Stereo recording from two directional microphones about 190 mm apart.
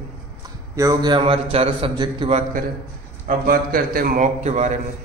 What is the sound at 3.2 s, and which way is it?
A man's voice, 50° right (ahead or behind).